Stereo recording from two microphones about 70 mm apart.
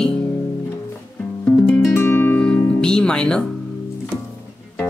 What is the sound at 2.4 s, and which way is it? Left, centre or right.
Music, centre.